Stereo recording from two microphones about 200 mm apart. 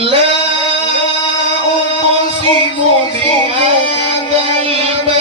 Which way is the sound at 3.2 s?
25° right (ahead or behind).